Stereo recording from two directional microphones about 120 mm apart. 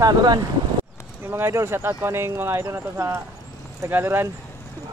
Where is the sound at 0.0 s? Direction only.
35° right (ahead or behind).